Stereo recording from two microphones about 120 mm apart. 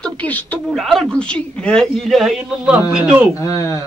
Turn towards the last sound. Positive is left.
turn(degrees=25)  # may be behind; listen again after turning